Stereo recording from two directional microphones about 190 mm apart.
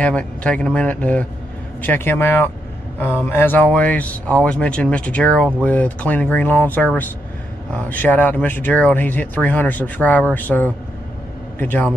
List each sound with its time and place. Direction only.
0.0 s speech: 5° left (ahead or behind)